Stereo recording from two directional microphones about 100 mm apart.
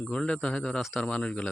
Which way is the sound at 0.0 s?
10° left (ahead or behind).